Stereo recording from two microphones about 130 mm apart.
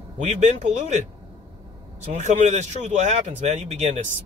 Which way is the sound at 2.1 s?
65° right (ahead or behind).